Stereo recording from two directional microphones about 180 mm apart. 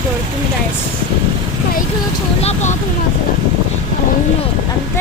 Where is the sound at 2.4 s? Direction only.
35° left (ahead or behind).